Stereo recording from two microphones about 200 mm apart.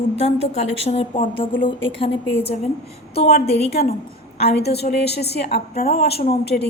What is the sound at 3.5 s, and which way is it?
Speech, 30° left (ahead or behind).